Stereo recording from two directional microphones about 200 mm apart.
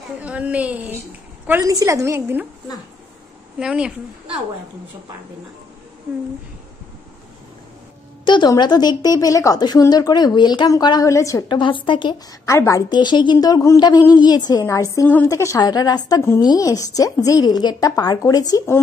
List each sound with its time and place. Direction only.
0.2 s a woman's voice: 5° right (ahead or behind)
3.5 s a woman's voice: 5° right (ahead or behind)
8.3 s a woman's voice: 20° left (ahead or behind)